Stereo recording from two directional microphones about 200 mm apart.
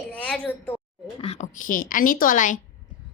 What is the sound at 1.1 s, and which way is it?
A woman's voice, 30° left (ahead or behind).